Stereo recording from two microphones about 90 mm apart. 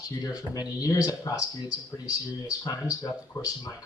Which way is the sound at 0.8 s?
40° left (ahead or behind).